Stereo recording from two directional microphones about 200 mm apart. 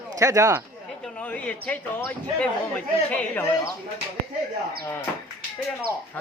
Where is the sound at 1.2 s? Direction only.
5° left (ahead or behind).